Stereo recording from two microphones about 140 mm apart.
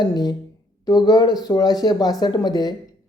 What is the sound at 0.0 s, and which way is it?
Speech, 30° left (ahead or behind).